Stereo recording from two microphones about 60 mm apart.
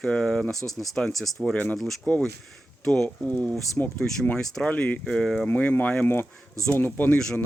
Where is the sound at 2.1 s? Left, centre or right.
Left.